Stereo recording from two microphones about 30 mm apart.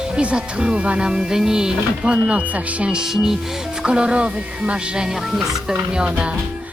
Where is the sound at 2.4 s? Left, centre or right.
Right.